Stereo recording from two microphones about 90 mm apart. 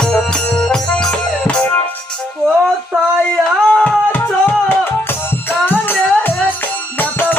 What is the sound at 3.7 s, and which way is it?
Music, 15° left (ahead or behind).